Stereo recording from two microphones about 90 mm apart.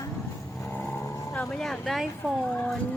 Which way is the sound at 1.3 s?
10° left (ahead or behind).